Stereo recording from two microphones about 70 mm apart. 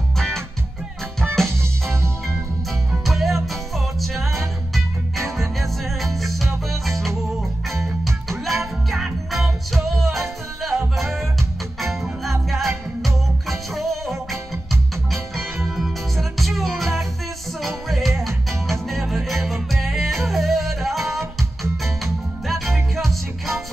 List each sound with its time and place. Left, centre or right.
1.2 s music: right
2.9 s music: centre